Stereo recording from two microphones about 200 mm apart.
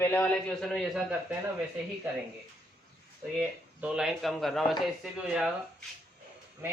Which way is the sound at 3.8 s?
5° right (ahead or behind).